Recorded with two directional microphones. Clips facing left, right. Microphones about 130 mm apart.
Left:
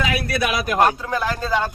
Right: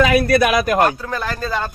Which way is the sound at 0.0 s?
45° right (ahead or behind).